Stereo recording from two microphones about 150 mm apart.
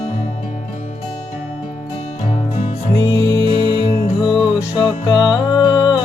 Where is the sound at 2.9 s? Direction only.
25° left (ahead or behind).